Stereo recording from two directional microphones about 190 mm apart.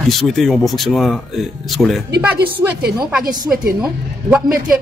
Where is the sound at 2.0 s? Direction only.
55° right (ahead or behind).